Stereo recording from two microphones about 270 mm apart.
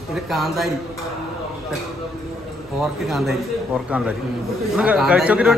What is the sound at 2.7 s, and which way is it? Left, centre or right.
A man's voice, centre.